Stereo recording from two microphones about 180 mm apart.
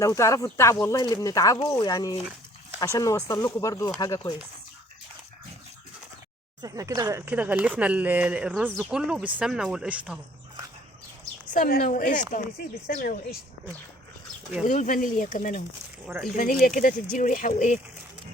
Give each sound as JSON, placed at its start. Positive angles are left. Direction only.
{"t": 0.0, "sound": "speech", "side_deg": 15}
{"t": 6.6, "sound": "speech", "side_deg": -20}
{"t": 11.5, "sound": "speech", "side_deg": 50}
{"t": 14.7, "sound": "speech", "side_deg": 45}